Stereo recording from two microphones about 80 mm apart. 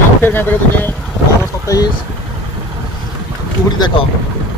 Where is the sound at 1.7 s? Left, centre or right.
Left.